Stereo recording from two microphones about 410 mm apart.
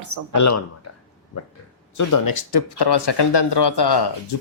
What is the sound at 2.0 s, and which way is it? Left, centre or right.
Speech, left.